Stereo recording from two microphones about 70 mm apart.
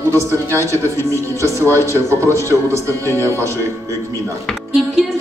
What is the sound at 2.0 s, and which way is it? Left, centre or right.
Speech, right.